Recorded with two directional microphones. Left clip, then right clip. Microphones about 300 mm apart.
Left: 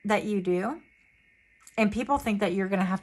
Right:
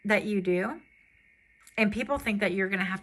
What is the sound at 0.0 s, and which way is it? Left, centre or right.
Speech, centre.